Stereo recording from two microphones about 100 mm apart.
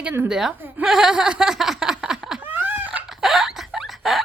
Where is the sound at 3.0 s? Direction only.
5° right (ahead or behind).